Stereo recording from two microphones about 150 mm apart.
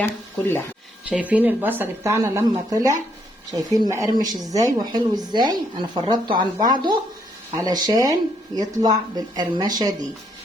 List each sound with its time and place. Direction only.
0.0 s speech: 15° left (ahead or behind)
1.1 s a woman's voice: 10° right (ahead or behind); by 9.9 s 25° right (ahead or behind)